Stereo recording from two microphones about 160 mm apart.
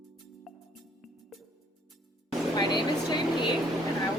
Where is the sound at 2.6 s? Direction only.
25° left (ahead or behind).